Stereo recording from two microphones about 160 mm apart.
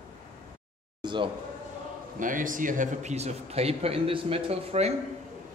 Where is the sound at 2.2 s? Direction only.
55° right (ahead or behind); by 4.9 s 40° right (ahead or behind).